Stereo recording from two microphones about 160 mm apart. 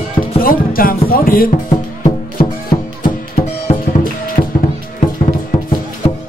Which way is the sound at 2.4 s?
50° left (ahead or behind).